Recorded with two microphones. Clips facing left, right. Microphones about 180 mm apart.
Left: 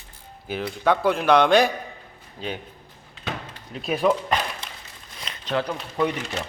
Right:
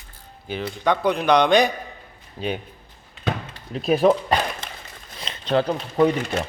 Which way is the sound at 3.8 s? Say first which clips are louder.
Right 4 dB; 35° right (ahead or behind).